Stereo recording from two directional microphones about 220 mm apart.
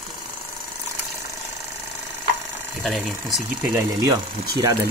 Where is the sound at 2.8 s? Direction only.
Centre (ahead or behind).